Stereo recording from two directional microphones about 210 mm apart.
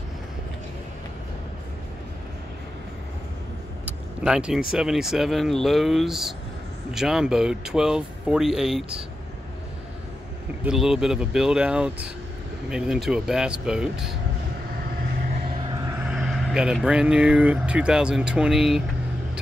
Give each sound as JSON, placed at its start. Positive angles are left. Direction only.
{"t": 4.2, "sound": "speech", "side_deg": -5}
{"t": 10.6, "sound": "speech", "side_deg": 0}
{"t": 16.1, "sound": "speech", "side_deg": -5}